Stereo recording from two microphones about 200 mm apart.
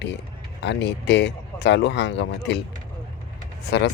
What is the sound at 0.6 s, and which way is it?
Speech, 60° left (ahead or behind).